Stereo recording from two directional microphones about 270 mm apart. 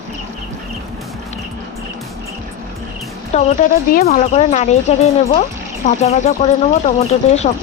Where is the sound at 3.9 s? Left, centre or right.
Left.